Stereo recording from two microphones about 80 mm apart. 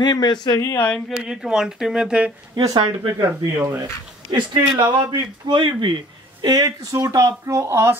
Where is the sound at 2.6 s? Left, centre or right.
Right.